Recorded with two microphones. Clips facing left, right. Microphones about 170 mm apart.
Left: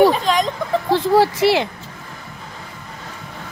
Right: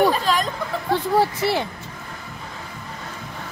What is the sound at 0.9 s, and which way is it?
Speech, 90° left.